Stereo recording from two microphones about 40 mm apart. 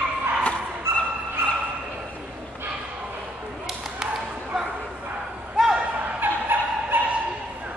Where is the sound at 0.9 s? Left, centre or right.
Right.